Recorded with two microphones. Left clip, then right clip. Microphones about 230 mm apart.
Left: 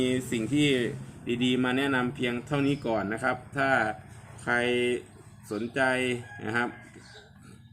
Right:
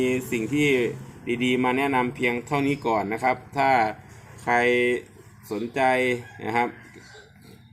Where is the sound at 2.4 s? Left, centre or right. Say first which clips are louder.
Right 4 dB; left.